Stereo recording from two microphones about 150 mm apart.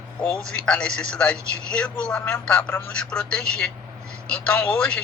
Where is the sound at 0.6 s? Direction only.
5° left (ahead or behind).